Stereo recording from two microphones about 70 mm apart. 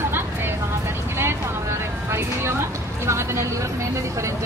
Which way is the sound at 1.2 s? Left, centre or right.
Right.